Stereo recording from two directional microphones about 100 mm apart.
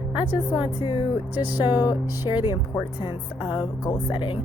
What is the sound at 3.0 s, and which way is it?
Speech, 60° left (ahead or behind).